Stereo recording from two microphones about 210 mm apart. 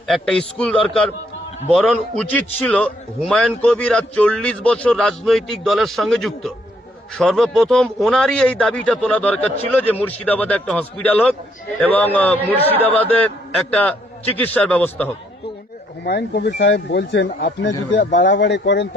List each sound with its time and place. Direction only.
0.1 s a man's voice: centre (ahead or behind)
14.3 s a man's voice: 5° left (ahead or behind)
16.0 s speech: 50° left (ahead or behind)
18.0 s speech: 40° left (ahead or behind)
18.3 s speech: 55° left (ahead or behind)